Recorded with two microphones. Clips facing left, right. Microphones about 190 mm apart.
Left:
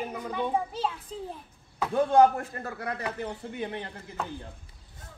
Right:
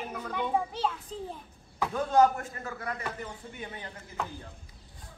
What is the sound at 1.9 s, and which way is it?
Speech, 30° left (ahead or behind).